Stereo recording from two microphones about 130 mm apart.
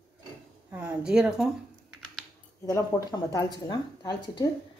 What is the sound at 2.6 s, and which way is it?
Speech, 25° left (ahead or behind).